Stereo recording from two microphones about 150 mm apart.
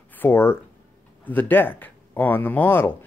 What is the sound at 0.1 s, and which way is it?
Speech, 15° left (ahead or behind).